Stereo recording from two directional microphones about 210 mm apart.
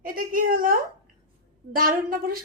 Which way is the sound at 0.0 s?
40° right (ahead or behind).